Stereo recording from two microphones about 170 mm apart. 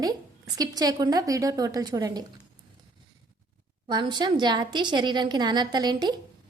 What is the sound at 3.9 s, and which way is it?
A woman's voice, 25° right (ahead or behind).